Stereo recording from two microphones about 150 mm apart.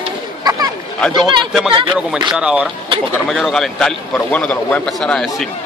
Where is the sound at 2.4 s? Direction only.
5° right (ahead or behind).